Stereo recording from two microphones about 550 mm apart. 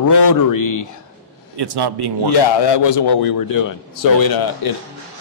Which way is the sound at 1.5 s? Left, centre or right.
Right.